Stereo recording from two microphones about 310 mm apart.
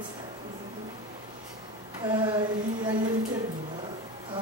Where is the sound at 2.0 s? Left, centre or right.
Centre.